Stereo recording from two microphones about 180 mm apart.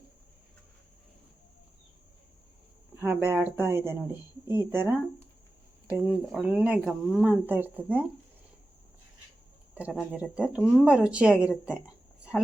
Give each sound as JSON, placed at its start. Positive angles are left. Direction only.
{"t": 2.9, "sound": "speech", "side_deg": -15}
{"t": 6.1, "sound": "speech", "side_deg": -5}
{"t": 9.7, "sound": "speech", "side_deg": -5}